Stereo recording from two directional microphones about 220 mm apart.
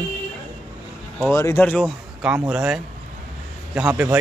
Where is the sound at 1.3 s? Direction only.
15° left (ahead or behind).